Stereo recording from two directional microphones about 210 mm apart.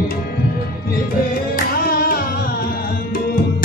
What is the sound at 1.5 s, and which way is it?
Music, 45° left (ahead or behind).